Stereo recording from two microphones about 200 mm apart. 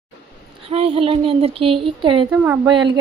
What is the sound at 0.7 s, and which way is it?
Speech, 30° right (ahead or behind).